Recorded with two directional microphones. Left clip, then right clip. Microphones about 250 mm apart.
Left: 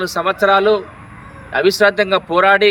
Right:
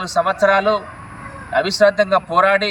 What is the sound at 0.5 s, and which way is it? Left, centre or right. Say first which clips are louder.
Speech: left 3 dB; centre.